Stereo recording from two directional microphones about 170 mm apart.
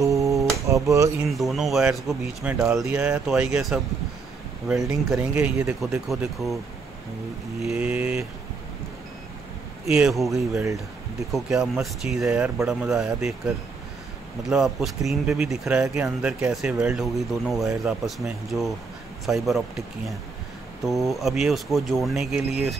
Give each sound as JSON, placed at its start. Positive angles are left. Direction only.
{"t": 0.0, "sound": "a sound", "side_deg": -20}
{"t": 0.8, "sound": "speech", "side_deg": -20}
{"t": 1.3, "sound": "speech", "side_deg": 0}
{"t": 7.6, "sound": "speech", "side_deg": -5}
{"t": 9.9, "sound": "speech", "side_deg": -5}
{"t": 10.5, "sound": "speech", "side_deg": -20}
{"t": 11.3, "sound": "speech", "side_deg": -5}
{"t": 14.5, "sound": "speech", "side_deg": 0}
{"t": 20.8, "sound": "speech", "side_deg": 0}